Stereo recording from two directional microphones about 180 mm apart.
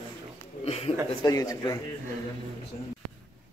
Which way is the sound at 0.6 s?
35° left (ahead or behind).